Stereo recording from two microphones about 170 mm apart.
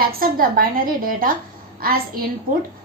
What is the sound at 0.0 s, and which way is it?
A woman's voice, 60° right (ahead or behind).